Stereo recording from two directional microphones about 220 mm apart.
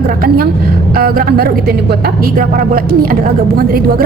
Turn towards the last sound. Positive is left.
turn(degrees=-40)  # may be behind; listen again after turning